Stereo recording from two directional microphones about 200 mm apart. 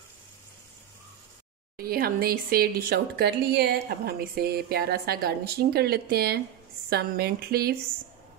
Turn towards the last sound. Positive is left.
turn(degrees=-50)  # may be behind; listen again after turning